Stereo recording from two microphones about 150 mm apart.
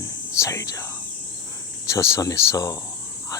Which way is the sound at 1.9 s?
20° left (ahead or behind).